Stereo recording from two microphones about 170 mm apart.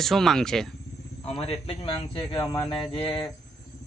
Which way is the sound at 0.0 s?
Centre (ahead or behind).